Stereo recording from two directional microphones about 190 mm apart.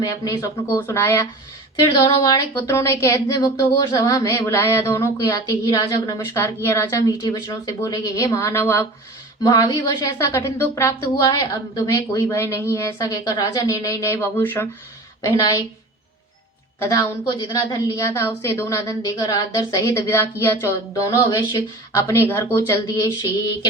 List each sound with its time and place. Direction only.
0.0 s a woman's voice: 15° left (ahead or behind)
16.8 s a woman's voice: 20° left (ahead or behind)